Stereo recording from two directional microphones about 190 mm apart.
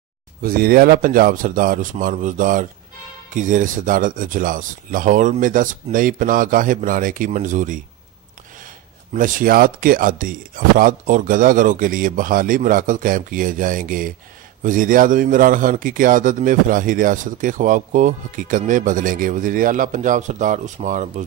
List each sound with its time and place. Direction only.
0.4 s a man's voice: 50° right (ahead or behind)